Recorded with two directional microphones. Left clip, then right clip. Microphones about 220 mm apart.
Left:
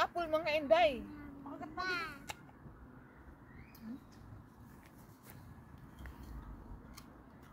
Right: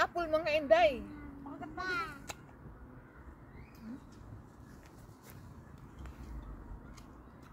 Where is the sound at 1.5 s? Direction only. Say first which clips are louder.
Right 1 dB; 45° left (ahead or behind).